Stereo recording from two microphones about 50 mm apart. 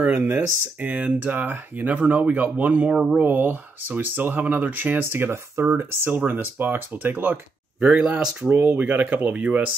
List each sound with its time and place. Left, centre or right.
0.0 s speech: right
3.2 s speech: right
5.3 s speech: right
7.8 s speech: right
8.5 s speech: right